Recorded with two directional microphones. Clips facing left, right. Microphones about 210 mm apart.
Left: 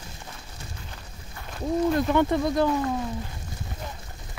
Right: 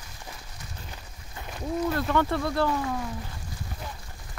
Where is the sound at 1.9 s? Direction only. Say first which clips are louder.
Left 3 dB; 20° left (ahead or behind).